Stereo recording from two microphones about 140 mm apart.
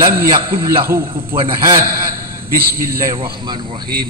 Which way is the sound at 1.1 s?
40° right (ahead or behind).